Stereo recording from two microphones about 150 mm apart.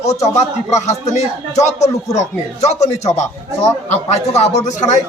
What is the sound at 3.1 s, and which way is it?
Speech, 20° left (ahead or behind).